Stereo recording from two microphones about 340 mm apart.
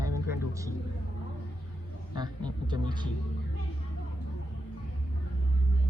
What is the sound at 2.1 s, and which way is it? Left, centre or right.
Speech, centre.